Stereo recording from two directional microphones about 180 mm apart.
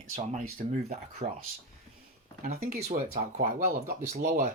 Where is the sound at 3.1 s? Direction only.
35° right (ahead or behind).